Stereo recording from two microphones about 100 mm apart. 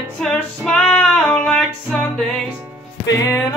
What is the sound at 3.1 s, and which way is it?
Music, 35° left (ahead or behind).